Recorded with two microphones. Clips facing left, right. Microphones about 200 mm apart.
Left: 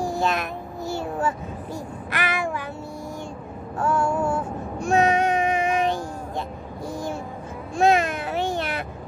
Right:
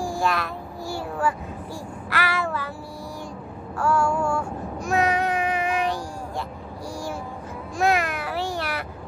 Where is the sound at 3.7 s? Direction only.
20° left (ahead or behind).